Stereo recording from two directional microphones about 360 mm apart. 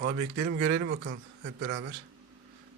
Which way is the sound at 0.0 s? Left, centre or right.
Right.